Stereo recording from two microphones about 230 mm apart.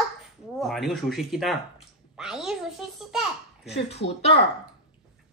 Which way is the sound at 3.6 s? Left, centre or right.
Left.